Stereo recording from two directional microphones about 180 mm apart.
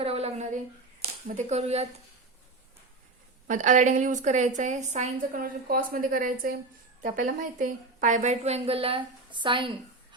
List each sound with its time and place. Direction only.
0.0 s a sound: 35° right (ahead or behind)
1.0 s speech: 40° right (ahead or behind)
3.4 s a woman's voice: 45° right (ahead or behind); by 10.2 s 25° right (ahead or behind)